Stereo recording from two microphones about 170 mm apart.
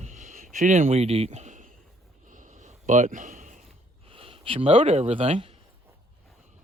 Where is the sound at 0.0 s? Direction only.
45° right (ahead or behind).